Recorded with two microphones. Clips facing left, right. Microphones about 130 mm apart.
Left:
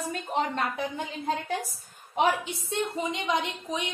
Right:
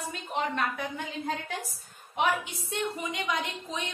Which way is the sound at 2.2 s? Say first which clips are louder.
Left 3 dB; 25° left (ahead or behind).